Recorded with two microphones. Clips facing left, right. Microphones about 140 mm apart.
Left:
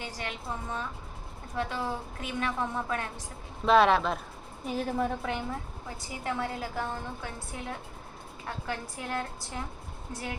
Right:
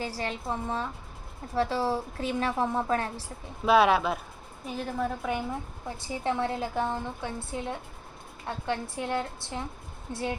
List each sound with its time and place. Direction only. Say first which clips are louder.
0.0 s a woman's voice: right 5 dB; 35° right (ahead or behind)
3.7 s a woman's voice: right 1 dB; 5° right (ahead or behind)
6.0 s a woman's voice: right 4 dB; 25° right (ahead or behind)